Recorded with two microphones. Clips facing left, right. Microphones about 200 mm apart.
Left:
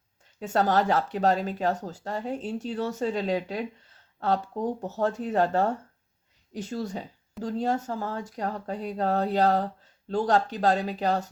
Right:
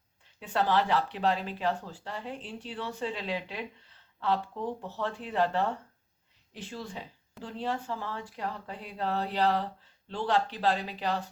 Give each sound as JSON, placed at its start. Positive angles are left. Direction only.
{"t": 0.3, "sound": "speech", "side_deg": 45}